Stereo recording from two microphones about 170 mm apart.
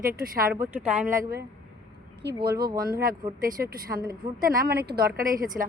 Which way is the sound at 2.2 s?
65° right (ahead or behind).